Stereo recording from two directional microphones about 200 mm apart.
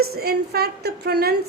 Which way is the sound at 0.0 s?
50° right (ahead or behind).